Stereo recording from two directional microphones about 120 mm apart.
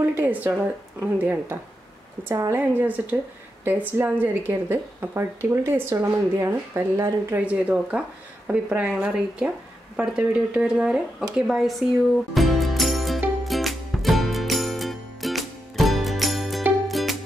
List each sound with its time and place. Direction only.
0.1 s a woman's voice: 15° right (ahead or behind)
7.3 s speech: 10° right (ahead or behind)
12.4 s music: centre (ahead or behind)